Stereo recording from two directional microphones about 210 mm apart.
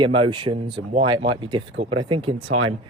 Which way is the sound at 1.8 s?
90° right.